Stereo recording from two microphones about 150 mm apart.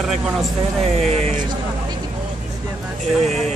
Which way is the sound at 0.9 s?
45° right (ahead or behind).